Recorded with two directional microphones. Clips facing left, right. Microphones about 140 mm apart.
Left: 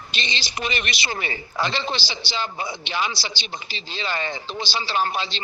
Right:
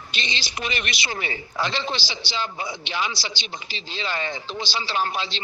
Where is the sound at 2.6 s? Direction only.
30° left (ahead or behind).